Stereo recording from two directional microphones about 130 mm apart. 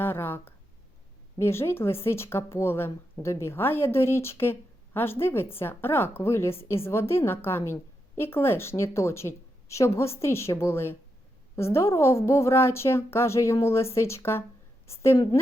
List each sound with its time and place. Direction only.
0.0 s a woman's voice: 15° left (ahead or behind)